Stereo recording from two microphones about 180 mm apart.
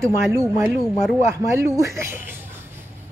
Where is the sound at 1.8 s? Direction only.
15° right (ahead or behind).